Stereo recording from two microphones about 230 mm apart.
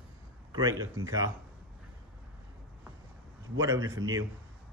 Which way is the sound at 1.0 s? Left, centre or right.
Centre.